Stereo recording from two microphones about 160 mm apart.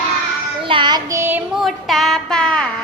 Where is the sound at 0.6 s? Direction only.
30° right (ahead or behind).